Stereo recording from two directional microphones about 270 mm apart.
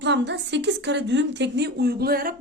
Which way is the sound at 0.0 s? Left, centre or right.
Right.